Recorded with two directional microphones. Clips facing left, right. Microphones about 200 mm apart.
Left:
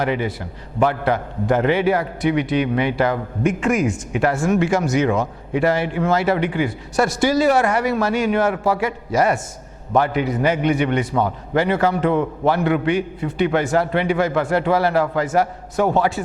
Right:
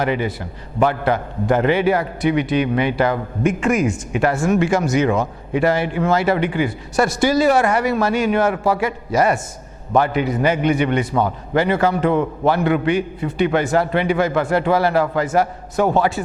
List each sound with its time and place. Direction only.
0.0 s a man's voice: 15° right (ahead or behind)